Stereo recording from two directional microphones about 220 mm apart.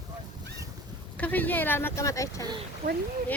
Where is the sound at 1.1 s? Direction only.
5° left (ahead or behind).